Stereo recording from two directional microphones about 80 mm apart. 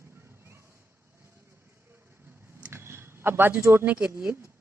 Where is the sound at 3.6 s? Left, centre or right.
Right.